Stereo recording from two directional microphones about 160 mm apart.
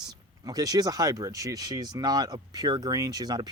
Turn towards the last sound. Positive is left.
turn(degrees=-25)  # may be behind; listen again after turning